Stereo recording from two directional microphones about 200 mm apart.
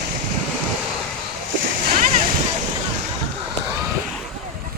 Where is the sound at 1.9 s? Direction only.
35° right (ahead or behind).